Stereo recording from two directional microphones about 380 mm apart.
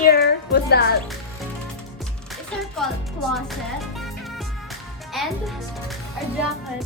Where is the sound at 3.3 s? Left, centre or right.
Centre.